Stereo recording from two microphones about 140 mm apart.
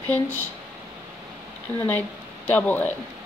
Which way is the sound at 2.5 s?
10° left (ahead or behind).